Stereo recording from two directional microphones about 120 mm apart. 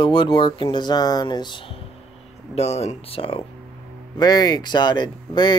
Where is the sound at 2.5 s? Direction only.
60° left (ahead or behind).